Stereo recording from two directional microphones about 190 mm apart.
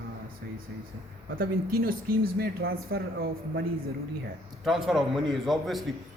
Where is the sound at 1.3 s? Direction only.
50° right (ahead or behind).